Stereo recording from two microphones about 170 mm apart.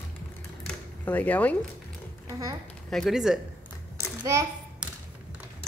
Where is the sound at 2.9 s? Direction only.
Centre (ahead or behind).